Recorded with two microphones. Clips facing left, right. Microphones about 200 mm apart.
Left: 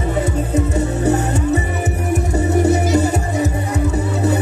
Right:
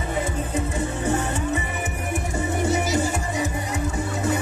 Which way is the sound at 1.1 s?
40° left (ahead or behind).